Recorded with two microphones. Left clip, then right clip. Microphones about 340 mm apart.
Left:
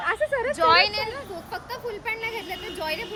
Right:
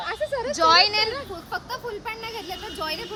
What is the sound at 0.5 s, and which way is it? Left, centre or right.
Speech, centre.